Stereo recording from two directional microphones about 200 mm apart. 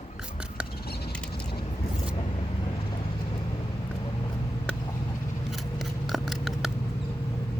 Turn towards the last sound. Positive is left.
turn(degrees=0)  # may be behind; listen again after turning